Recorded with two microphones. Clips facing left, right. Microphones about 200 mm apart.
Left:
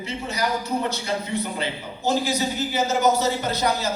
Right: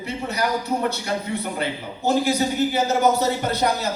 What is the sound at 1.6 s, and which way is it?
Speech, 60° right (ahead or behind).